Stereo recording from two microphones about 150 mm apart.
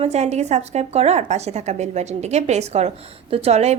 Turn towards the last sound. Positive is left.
turn(degrees=-45)  # may be behind; listen again after turning